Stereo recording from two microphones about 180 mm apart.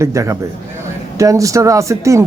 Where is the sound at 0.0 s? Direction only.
15° right (ahead or behind).